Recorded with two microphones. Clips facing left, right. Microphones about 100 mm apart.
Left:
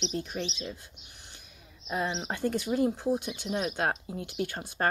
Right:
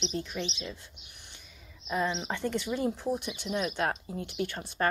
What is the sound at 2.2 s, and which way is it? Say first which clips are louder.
Speech: left 2 dB; 40° left (ahead or behind).